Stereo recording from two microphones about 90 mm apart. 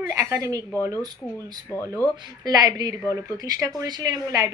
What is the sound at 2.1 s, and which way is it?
A woman's voice, 50° right (ahead or behind).